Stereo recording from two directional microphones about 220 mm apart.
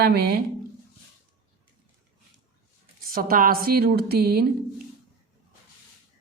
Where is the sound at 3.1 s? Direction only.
40° right (ahead or behind).